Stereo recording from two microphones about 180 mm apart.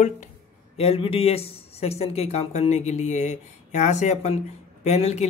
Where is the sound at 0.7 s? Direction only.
35° left (ahead or behind).